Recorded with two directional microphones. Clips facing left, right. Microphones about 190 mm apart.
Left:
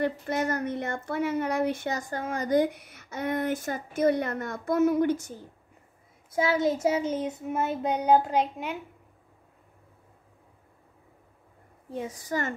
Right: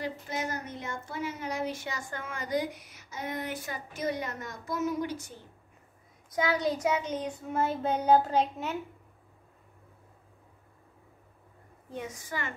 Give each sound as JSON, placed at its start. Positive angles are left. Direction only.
{"t": 0.0, "sound": "a woman's voice", "side_deg": 60}
{"t": 2.0, "sound": "a woman's voice", "side_deg": 40}
{"t": 6.3, "sound": "child singing", "side_deg": 25}
{"t": 11.9, "sound": "a woman's voice", "side_deg": 30}